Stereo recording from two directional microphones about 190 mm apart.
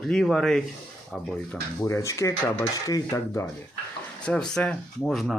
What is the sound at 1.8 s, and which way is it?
Dishes, 15° left (ahead or behind).